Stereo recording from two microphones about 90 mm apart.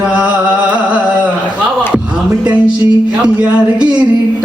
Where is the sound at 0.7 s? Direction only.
15° right (ahead or behind).